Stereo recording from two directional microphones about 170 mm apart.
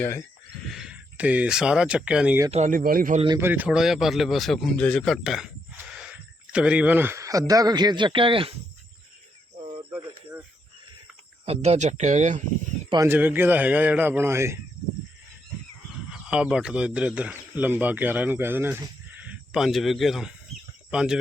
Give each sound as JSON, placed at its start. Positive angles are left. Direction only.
{"t": 0.0, "sound": "speech", "side_deg": 15}
{"t": 0.7, "sound": "speech", "side_deg": -5}
{"t": 2.5, "sound": "speech", "side_deg": -45}
{"t": 3.3, "sound": "speech", "side_deg": -10}
{"t": 11.4, "sound": "speech", "side_deg": -40}
{"t": 13.1, "sound": "a man's voice", "side_deg": -10}
{"t": 16.0, "sound": "speech", "side_deg": -5}